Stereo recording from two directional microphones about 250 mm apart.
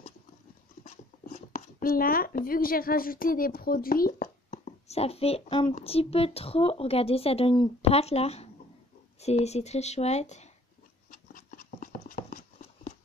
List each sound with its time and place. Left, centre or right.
0.8 s speech: left
11.1 s dog: left